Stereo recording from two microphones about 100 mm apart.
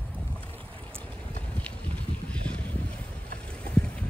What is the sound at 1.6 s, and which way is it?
Boat, 10° left (ahead or behind).